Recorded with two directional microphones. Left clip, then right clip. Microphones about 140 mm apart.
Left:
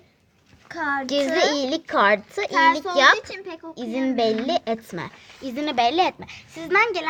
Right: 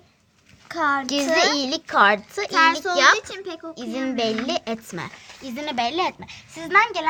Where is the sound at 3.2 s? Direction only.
35° right (ahead or behind).